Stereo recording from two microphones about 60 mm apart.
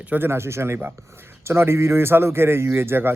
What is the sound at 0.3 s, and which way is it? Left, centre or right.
Speech, right.